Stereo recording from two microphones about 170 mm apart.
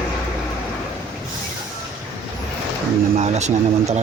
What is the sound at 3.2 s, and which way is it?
Speech, 40° right (ahead or behind).